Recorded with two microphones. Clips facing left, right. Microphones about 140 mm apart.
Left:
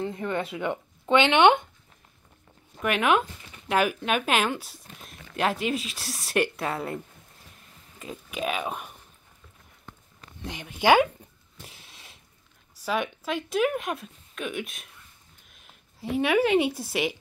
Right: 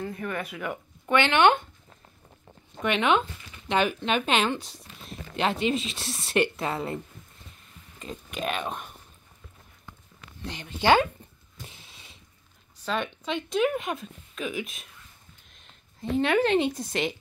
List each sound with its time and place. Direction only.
0.0 s speech: 25° left (ahead or behind)
2.8 s speech: 5° left (ahead or behind)
8.0 s speech: 5° left (ahead or behind)
10.4 s speech: 10° left (ahead or behind)
11.6 s a sound: centre (ahead or behind)
12.8 s speech: 10° left (ahead or behind)